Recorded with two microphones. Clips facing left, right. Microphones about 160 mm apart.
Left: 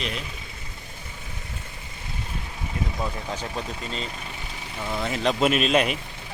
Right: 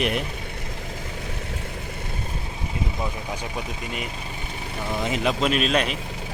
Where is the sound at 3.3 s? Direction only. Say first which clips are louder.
Even; 10° right (ahead or behind).